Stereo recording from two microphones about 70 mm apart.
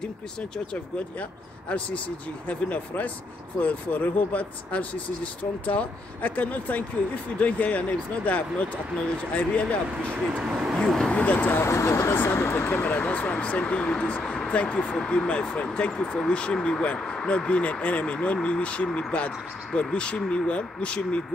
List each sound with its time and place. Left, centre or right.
2.4 s speech: left
9.3 s speech: left
10.3 s speech: centre
10.8 s vehicle: centre
11.1 s speech: left
11.6 s speech: left
12.2 s speech: left